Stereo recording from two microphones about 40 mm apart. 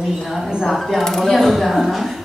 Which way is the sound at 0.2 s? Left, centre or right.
Centre.